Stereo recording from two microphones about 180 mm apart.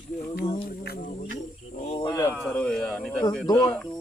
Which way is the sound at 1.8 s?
30° left (ahead or behind).